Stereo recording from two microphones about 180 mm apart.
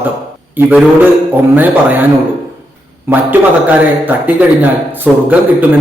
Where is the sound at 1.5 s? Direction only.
10° right (ahead or behind).